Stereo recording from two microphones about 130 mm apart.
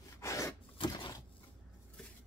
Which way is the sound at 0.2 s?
25° left (ahead or behind).